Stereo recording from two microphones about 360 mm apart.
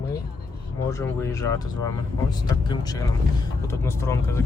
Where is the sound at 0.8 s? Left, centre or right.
Centre.